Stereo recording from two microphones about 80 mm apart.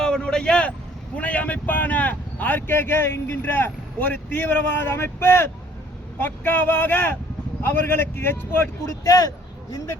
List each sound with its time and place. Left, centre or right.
0.0 s vehicle: centre
1.1 s speech: centre
9.0 s speech: left